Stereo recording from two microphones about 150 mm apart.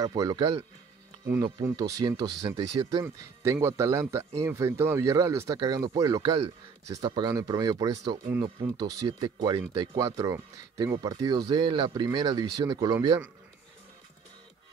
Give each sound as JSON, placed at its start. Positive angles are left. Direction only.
{"t": 0.0, "sound": "speech", "side_deg": -25}